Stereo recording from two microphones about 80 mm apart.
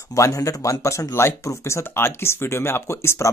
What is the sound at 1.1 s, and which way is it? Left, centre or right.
Speech, left.